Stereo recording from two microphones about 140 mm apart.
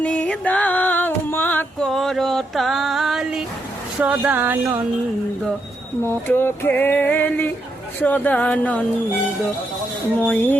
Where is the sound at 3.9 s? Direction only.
10° right (ahead or behind).